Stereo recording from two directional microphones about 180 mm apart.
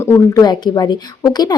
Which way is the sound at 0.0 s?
20° left (ahead or behind).